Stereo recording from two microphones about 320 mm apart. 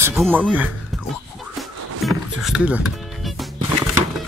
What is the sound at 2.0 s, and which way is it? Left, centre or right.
Music, centre.